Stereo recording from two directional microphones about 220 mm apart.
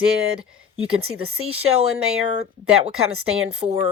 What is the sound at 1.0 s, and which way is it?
Speech, 75° right (ahead or behind).